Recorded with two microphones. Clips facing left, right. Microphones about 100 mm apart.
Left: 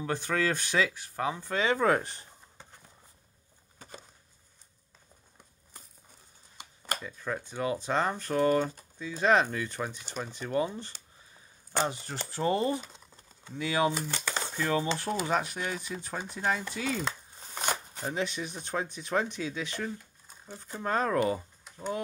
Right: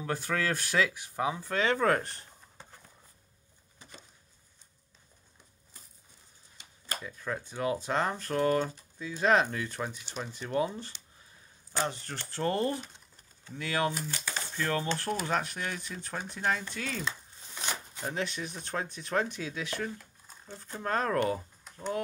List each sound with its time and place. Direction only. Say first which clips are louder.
0.0 s speech: left 2 dB; centre (ahead or behind)
7.0 s speech: left 1 dB; centre (ahead or behind)
11.9 s speech: left 3 dB; 10° left (ahead or behind)
14.0 s a sound: left 3 dB; 90° left
14.6 s speech: left 2 dB; 5° left (ahead or behind)
17.6 s a sound: left 5 dB; 45° left (ahead or behind)
18.0 s speech: left 2 dB; centre (ahead or behind)